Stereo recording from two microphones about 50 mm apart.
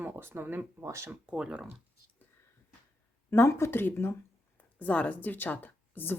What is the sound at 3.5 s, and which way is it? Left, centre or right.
Speech, left.